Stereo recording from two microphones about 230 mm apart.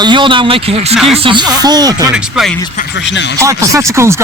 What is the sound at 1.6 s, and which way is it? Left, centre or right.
Speech, centre.